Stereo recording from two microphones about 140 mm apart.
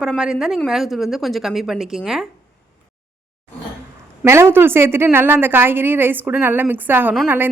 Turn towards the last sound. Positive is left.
turn(degrees=-15)  # may be behind; listen again after turning